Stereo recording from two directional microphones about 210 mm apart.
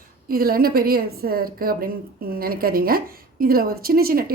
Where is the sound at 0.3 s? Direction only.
45° right (ahead or behind).